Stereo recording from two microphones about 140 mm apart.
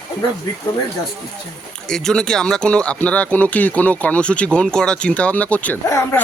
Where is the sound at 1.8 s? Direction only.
5° left (ahead or behind).